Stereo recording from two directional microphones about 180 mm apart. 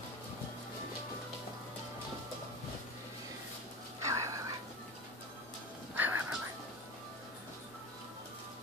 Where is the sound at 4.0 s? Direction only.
15° right (ahead or behind).